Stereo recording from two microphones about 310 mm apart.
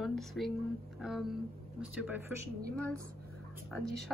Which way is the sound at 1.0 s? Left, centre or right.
Centre.